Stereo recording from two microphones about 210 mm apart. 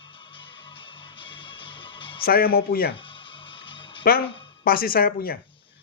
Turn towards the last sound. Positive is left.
turn(degrees=45)  # may be behind; listen again after turning